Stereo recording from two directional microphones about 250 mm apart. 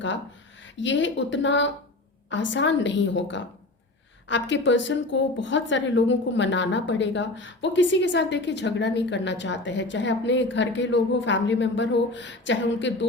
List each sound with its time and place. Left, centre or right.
0.6 s a woman's voice: left